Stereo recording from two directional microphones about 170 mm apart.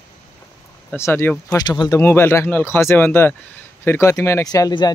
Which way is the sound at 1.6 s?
25° left (ahead or behind).